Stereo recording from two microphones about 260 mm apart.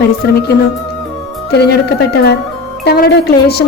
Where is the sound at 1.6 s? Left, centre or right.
Left.